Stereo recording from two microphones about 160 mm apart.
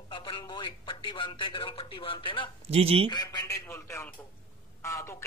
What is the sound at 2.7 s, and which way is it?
Speech, 35° right (ahead or behind).